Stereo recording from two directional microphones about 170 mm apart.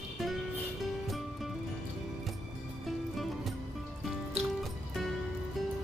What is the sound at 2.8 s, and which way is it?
Music, centre (ahead or behind).